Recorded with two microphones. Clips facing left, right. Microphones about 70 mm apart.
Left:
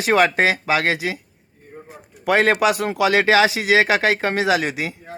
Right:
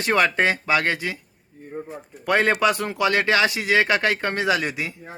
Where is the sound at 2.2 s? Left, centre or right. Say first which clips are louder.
Left 3 dB; left.